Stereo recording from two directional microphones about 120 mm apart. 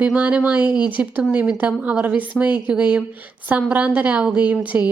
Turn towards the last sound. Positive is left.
turn(degrees=-15)  # may be behind; listen again after turning